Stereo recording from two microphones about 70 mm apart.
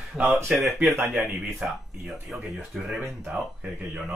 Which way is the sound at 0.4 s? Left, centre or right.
Right.